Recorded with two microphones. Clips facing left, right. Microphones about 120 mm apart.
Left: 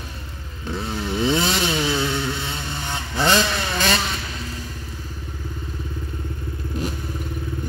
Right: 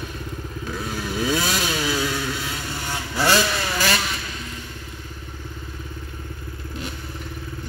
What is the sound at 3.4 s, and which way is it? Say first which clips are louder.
Vehicle: even; 5° right (ahead or behind).